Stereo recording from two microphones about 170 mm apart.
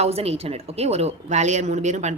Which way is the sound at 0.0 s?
35° right (ahead or behind).